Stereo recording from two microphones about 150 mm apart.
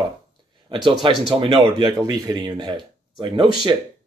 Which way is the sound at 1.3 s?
35° right (ahead or behind).